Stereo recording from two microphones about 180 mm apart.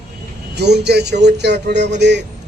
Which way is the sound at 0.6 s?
65° right (ahead or behind).